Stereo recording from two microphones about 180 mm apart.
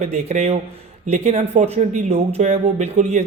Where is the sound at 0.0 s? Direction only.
35° right (ahead or behind).